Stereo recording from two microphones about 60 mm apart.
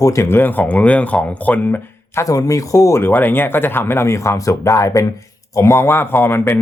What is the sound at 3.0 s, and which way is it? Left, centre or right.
Speech, left.